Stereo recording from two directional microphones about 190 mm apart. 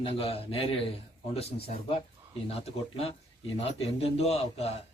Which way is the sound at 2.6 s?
30° left (ahead or behind).